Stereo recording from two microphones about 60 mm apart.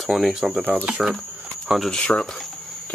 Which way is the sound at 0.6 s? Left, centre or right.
Right.